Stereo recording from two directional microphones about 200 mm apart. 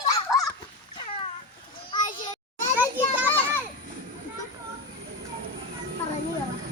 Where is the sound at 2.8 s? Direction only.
10° right (ahead or behind).